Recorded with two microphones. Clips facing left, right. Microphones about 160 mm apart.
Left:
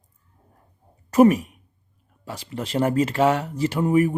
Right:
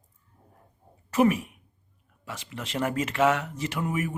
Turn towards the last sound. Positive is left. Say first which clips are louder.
# left 10 dB
turn(degrees=35)  # may be behind; listen again after turning